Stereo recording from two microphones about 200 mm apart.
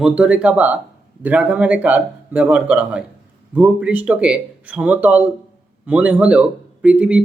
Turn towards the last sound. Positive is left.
turn(degrees=-5)  # may be behind; listen again after turning